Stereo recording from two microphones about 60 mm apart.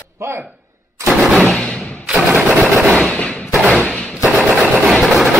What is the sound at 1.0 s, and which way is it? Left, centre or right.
Gunshot, centre.